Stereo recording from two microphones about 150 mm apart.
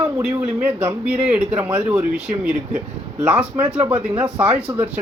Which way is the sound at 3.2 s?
10° right (ahead or behind).